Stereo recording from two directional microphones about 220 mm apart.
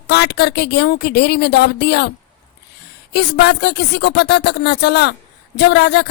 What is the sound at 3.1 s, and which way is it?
A woman's voice, 50° left (ahead or behind).